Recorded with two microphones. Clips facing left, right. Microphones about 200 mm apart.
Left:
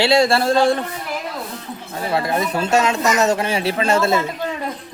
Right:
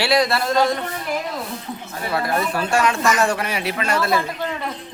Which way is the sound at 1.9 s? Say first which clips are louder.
Left 2 dB; 25° left (ahead or behind).